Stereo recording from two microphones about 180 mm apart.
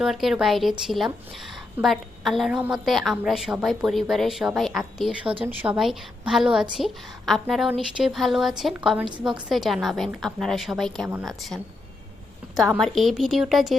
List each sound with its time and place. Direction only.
0.0 s a woman's voice: centre (ahead or behind)
5.2 s speech: 30° right (ahead or behind)
5.5 s a woman's voice: 5° right (ahead or behind)
12.8 s a woman's voice: centre (ahead or behind)